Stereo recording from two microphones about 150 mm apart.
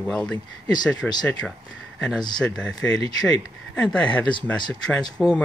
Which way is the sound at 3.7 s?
10° left (ahead or behind).